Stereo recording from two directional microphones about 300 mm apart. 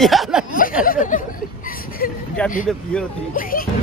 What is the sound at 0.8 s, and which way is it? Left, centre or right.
Speech, left.